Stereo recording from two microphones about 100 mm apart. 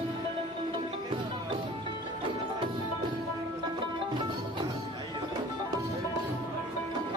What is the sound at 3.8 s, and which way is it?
Music, 50° right (ahead or behind).